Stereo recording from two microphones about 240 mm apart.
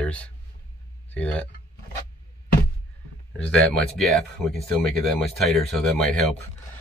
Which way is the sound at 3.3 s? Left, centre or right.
Centre.